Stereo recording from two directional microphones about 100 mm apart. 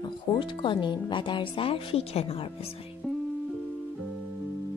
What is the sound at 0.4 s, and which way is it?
Speech, 55° left (ahead or behind).